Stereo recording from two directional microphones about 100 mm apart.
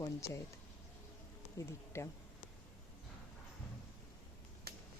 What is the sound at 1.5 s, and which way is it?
Speech, 30° left (ahead or behind).